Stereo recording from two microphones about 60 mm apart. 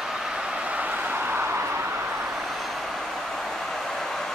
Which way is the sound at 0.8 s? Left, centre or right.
Right.